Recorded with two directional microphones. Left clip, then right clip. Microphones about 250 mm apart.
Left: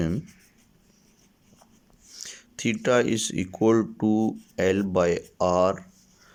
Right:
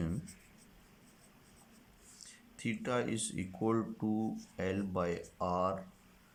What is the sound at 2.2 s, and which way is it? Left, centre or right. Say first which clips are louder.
Speech: left 12 dB; left.